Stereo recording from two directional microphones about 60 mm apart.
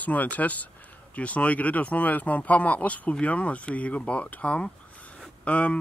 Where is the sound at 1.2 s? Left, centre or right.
Left.